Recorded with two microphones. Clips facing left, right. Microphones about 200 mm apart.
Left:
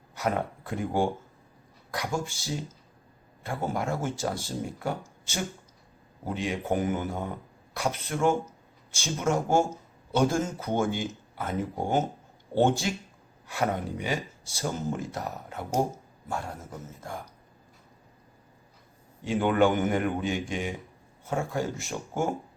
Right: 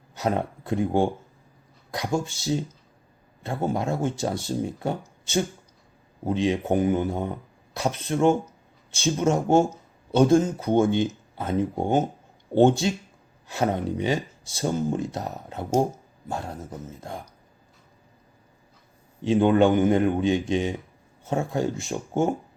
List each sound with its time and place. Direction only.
0.2 s speech: 25° right (ahead or behind)
19.2 s speech: 20° right (ahead or behind)